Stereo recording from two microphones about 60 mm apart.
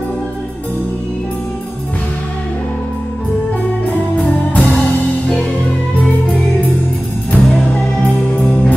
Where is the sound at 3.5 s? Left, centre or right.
Left.